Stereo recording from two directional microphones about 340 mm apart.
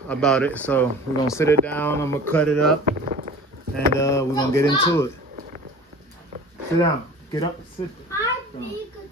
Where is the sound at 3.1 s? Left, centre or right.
Right.